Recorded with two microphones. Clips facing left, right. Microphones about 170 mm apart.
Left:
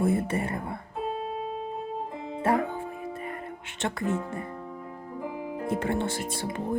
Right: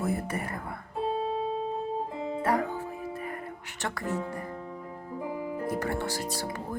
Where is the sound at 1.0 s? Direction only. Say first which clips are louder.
Right 3 dB; 30° right (ahead or behind).